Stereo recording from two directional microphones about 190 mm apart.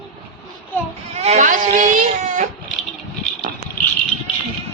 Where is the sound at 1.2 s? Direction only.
35° right (ahead or behind).